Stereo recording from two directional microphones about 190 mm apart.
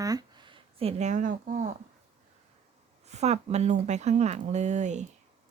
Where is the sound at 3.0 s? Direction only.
35° right (ahead or behind).